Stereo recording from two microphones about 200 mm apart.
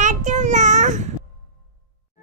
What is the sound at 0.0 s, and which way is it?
Child singing, 40° right (ahead or behind).